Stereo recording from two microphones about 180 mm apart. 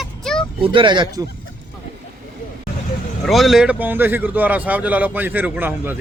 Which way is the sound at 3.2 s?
Centre (ahead or behind).